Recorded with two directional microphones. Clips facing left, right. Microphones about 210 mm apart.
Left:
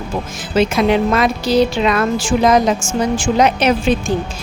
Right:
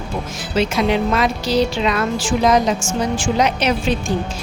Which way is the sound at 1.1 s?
55° left (ahead or behind).